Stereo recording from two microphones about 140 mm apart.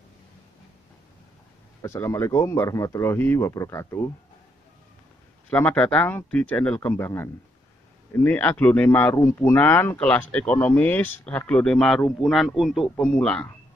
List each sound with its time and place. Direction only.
1.8 s speech: 20° left (ahead or behind)
5.5 s speech: 10° left (ahead or behind)
8.1 s speech: 15° left (ahead or behind)
9.1 s a man's voice: 20° left (ahead or behind)